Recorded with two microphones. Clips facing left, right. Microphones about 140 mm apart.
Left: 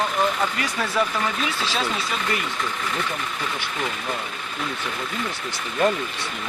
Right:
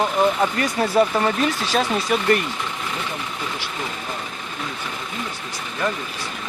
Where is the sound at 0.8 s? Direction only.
35° right (ahead or behind).